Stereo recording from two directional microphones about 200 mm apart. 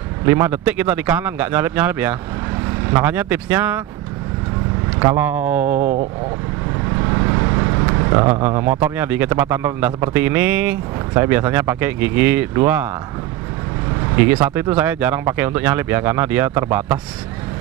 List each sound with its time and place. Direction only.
0.2 s a man's voice: 10° right (ahead or behind)
4.9 s speech: 15° right (ahead or behind)
5.6 s speech: 40° right (ahead or behind)
7.0 s vehicle: 20° right (ahead or behind)
8.5 s a man's voice: 15° right (ahead or behind)
14.2 s a man's voice: 10° right (ahead or behind)